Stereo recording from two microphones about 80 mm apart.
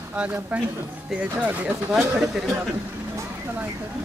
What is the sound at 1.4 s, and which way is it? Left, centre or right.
Speech, centre.